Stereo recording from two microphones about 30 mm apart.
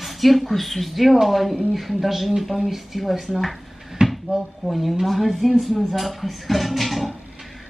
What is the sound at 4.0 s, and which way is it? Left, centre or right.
Cupboard open or close, right.